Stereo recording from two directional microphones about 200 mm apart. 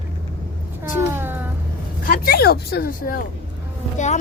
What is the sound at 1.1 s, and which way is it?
Speech, 10° right (ahead or behind).